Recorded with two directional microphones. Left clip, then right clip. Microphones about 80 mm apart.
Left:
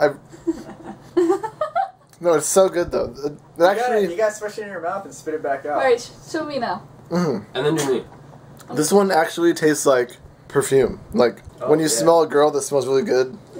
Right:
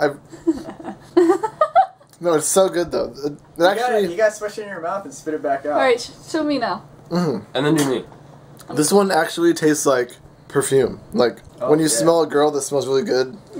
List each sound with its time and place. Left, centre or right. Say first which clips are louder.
0.0 s a sound: even; centre
0.8 s a sound: right 3 dB; right
2.1 s speech: left 1 dB; centre
4.5 s speech: right 1 dB; right
5.8 s a woman's voice: even; centre
7.1 s speech: even; centre
8.7 s speech: even; centre